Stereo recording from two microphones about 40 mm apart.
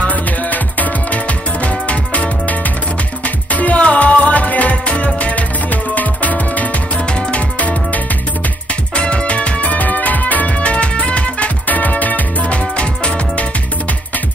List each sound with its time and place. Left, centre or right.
0.0 s music: left
3.5 s music: left
7.2 s music: left